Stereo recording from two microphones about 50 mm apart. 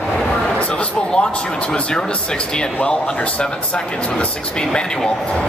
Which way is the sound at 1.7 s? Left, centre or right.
Centre.